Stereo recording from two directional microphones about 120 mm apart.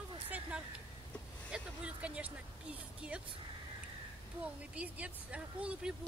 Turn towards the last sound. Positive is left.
turn(degrees=-10)  # may be behind; listen again after turning